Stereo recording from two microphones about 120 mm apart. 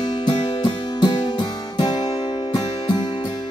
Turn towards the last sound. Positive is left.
turn(degrees=35)  # may be behind; listen again after turning